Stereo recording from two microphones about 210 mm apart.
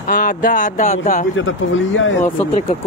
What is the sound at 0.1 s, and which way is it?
Speech, 40° left (ahead or behind).